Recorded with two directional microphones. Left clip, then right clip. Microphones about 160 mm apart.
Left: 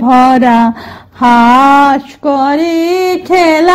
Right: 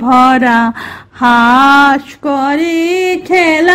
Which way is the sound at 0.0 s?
30° right (ahead or behind).